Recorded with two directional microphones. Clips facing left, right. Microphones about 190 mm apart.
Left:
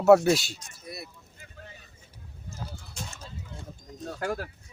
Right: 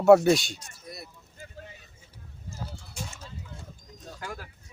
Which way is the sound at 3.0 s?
10° right (ahead or behind).